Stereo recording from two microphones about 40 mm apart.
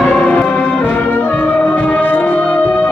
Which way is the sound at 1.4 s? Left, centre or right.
Left.